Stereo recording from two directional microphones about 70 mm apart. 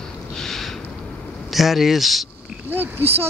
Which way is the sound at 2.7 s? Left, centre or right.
Right.